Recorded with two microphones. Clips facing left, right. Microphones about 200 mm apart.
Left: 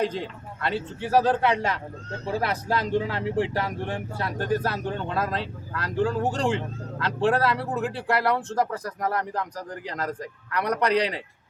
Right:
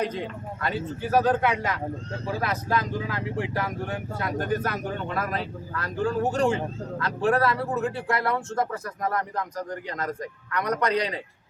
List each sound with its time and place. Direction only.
0.0 s speech: 30° left (ahead or behind)